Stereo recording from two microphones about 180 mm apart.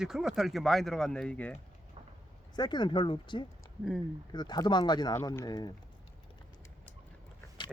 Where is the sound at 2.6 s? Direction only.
25° left (ahead or behind).